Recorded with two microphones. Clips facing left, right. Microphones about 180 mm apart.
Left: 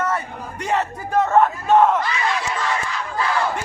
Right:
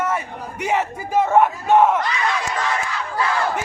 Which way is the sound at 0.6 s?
10° right (ahead or behind).